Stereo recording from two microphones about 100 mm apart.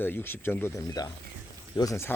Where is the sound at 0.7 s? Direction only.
35° left (ahead or behind).